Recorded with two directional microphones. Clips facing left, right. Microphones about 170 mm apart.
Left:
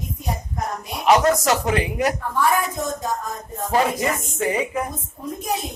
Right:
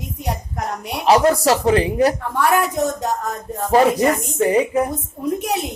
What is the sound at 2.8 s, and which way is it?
Speech, 70° right (ahead or behind).